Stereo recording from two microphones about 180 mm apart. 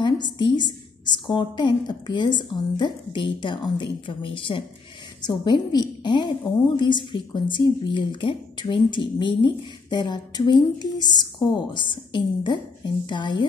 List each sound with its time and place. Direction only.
0.0 s a woman's voice: 25° left (ahead or behind)